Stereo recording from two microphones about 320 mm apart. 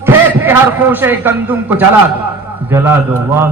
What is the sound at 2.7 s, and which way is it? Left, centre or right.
Speech, centre.